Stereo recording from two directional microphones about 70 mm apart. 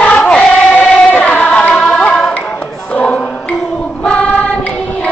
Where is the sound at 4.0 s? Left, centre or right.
Centre.